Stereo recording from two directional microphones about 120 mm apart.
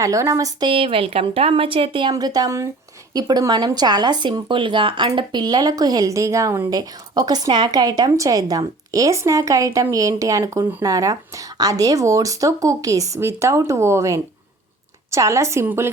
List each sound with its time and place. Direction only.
0.0 s speech: 25° right (ahead or behind)
0.7 s speech: 45° right (ahead or behind); by 15.9 s 20° right (ahead or behind)